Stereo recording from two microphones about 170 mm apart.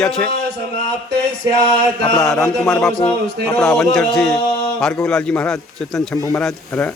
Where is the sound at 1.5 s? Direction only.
25° left (ahead or behind).